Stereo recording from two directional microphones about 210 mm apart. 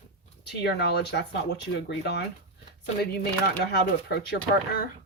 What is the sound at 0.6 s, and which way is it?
Speech, 55° left (ahead or behind).